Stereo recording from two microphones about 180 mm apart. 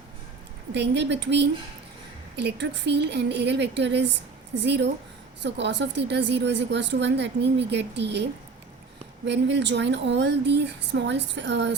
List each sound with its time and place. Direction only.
0.7 s speech: 75° right (ahead or behind)